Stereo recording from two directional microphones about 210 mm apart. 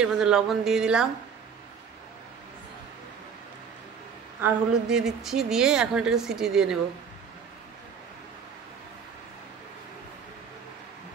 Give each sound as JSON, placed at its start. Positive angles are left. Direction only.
{"t": 0.0, "sound": "a woman's voice", "side_deg": 0}
{"t": 4.4, "sound": "a woman's voice", "side_deg": -5}